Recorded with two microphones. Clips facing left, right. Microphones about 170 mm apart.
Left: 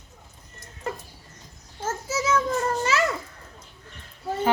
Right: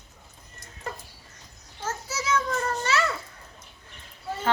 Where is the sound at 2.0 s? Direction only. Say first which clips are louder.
Left 9 dB; 45° left (ahead or behind).